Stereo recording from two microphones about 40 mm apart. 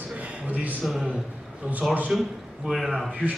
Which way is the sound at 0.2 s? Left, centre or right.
Right.